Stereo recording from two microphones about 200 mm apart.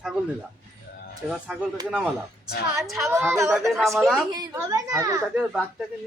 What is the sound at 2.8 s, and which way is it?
Speech, centre (ahead or behind).